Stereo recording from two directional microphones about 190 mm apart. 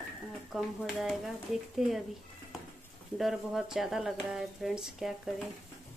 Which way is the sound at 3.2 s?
Centre (ahead or behind).